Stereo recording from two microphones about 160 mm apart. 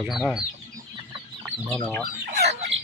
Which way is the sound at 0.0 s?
5° right (ahead or behind).